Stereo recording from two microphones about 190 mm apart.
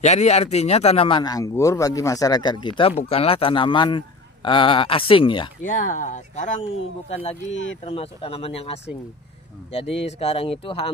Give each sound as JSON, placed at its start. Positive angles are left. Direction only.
{"t": 0.0, "sound": "a man's voice", "side_deg": 35}
{"t": 5.6, "sound": "speech", "side_deg": 45}
{"t": 7.8, "sound": "speech", "side_deg": 30}